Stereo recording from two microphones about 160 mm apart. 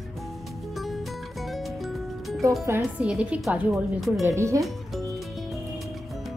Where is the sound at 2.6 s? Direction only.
15° right (ahead or behind).